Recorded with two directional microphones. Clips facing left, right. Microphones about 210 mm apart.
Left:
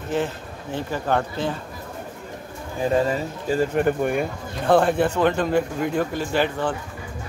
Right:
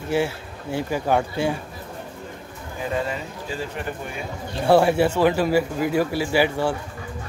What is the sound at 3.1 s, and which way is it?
Speech, 45° left (ahead or behind).